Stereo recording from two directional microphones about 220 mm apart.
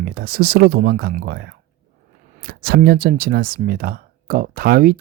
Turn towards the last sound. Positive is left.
turn(degrees=-40)  # may be behind; listen again after turning